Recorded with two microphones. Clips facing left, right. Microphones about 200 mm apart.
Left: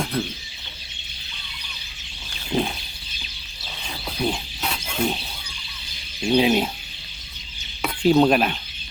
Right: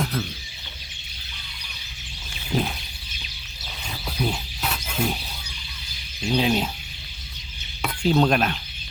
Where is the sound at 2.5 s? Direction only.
25° left (ahead or behind).